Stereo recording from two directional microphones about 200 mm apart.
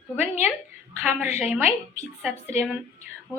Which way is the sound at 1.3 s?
35° left (ahead or behind).